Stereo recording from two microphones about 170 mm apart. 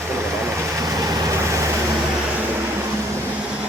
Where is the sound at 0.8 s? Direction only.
20° right (ahead or behind).